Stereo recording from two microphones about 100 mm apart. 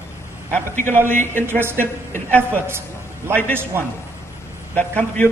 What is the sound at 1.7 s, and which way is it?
Speech, 20° left (ahead or behind).